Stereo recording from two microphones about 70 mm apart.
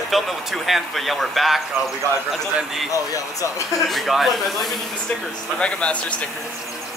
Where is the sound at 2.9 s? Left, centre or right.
Left.